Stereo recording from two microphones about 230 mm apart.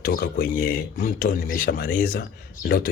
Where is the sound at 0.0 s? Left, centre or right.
Left.